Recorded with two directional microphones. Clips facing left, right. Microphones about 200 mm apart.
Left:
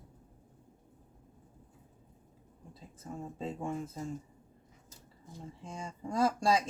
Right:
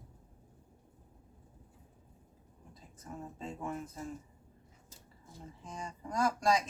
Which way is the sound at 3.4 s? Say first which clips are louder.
Left 4 dB; 30° left (ahead or behind).